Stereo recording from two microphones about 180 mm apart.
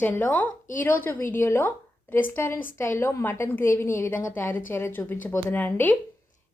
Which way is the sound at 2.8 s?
10° left (ahead or behind).